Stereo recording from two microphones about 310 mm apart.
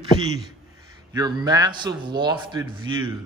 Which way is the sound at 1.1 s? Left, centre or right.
Centre.